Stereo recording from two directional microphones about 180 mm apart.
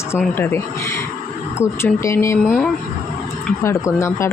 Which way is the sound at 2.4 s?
5° right (ahead or behind).